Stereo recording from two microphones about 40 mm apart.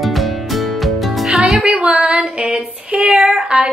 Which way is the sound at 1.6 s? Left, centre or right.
Right.